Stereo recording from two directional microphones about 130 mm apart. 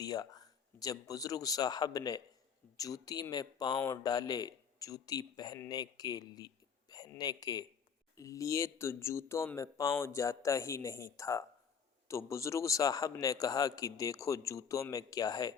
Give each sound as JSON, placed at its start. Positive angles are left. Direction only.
{"t": 0.0, "sound": "a man's voice", "side_deg": 30}